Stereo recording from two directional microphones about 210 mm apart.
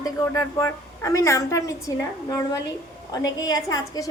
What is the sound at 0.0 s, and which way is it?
A woman's voice, 15° left (ahead or behind).